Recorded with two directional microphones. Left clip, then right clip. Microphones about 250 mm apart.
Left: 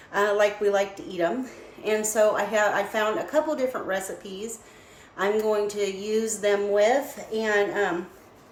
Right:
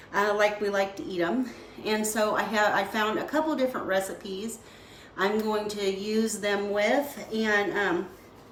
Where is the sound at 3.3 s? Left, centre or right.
Centre.